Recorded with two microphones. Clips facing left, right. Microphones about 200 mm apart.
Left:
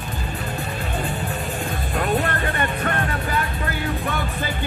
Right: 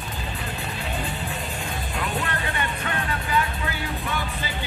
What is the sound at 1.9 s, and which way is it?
Music, 50° left (ahead or behind).